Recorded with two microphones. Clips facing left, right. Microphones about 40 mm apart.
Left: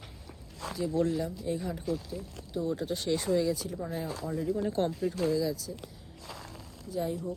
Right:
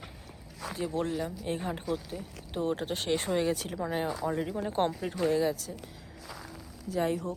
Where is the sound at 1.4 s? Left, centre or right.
Right.